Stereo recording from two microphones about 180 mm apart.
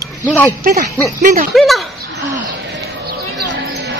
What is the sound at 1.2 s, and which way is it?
Speech, 45° right (ahead or behind).